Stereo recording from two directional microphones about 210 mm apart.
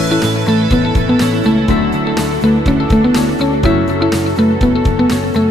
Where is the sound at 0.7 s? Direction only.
Centre (ahead or behind).